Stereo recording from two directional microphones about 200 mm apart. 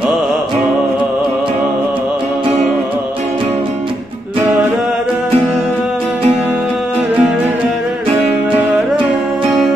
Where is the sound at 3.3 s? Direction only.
25° right (ahead or behind).